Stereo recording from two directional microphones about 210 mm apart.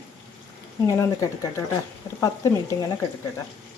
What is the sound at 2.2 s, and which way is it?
Speech, 15° left (ahead or behind).